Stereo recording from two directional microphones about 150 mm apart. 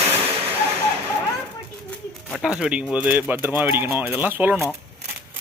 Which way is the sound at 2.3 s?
5° right (ahead or behind).